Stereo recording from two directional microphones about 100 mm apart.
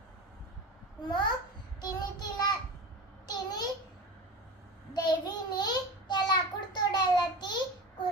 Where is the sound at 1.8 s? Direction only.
45° left (ahead or behind).